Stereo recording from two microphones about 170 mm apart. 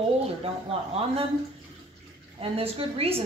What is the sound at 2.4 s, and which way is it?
Speech, 35° right (ahead or behind).